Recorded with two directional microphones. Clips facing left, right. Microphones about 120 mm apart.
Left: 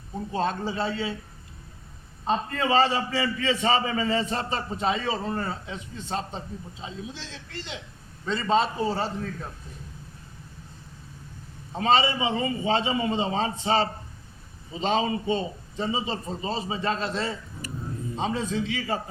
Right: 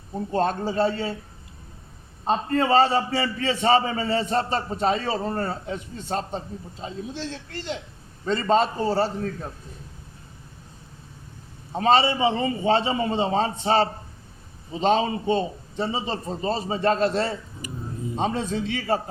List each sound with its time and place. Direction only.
0.3 s a man's voice: 50° right (ahead or behind)
2.2 s a man's voice: 40° right (ahead or behind)
11.8 s a man's voice: 40° right (ahead or behind)
17.6 s a sound: 15° right (ahead or behind)
18.2 s a man's voice: 50° right (ahead or behind)